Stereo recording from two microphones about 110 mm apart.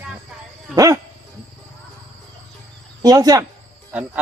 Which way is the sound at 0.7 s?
30° right (ahead or behind).